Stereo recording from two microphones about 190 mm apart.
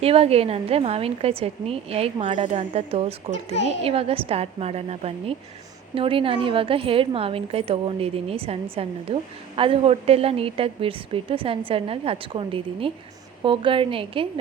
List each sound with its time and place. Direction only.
0.0 s a woman's voice: 30° right (ahead or behind)